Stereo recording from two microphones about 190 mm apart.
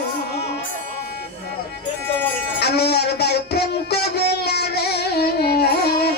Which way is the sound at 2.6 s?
60° left (ahead or behind).